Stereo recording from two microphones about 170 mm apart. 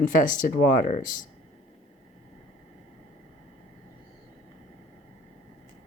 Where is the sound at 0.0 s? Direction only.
50° left (ahead or behind).